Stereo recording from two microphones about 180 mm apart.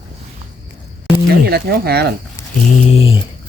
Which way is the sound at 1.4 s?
60° right (ahead or behind).